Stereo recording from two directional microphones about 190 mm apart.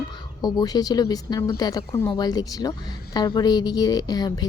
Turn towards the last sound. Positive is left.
turn(degrees=20)  # may be behind; listen again after turning